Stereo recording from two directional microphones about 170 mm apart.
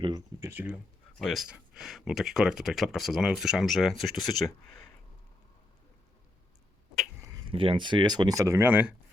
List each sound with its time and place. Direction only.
0.0 s speech: 20° right (ahead or behind)
1.2 s speech: centre (ahead or behind)
7.5 s speech: 30° right (ahead or behind); by 9.0 s 10° right (ahead or behind)